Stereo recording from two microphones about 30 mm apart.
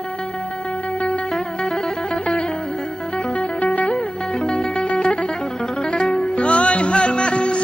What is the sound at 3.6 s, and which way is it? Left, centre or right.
Music, left.